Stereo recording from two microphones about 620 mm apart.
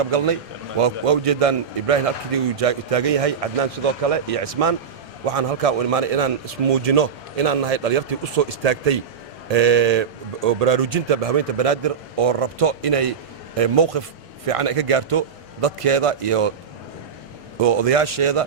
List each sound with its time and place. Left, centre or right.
0.0 s a man's voice: right
17.6 s a man's voice: right